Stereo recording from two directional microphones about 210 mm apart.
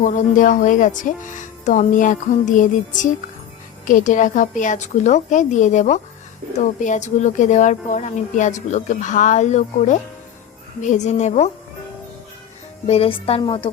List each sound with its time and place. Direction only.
0.0 s speech: 40° left (ahead or behind)
12.9 s a woman's voice: 30° left (ahead or behind)